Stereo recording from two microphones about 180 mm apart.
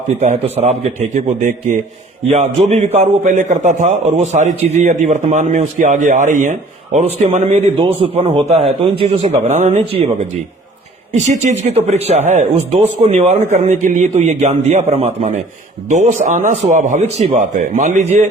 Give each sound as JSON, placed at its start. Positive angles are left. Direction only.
{"t": 0.1, "sound": "a man's voice", "side_deg": -35}
{"t": 11.3, "sound": "a man's voice", "side_deg": -40}